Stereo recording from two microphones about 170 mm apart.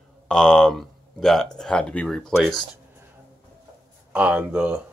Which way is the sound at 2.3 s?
5° right (ahead or behind).